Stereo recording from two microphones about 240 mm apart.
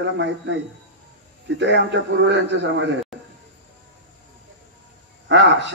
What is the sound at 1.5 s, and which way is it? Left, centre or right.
A man's voice, right.